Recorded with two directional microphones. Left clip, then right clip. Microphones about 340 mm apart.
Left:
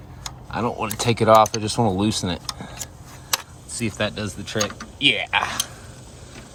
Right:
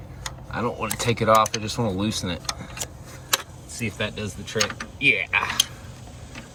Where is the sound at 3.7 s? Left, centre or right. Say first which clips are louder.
Left 3 dB; centre.